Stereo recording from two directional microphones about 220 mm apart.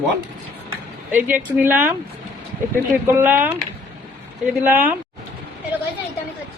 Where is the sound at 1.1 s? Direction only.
10° right (ahead or behind).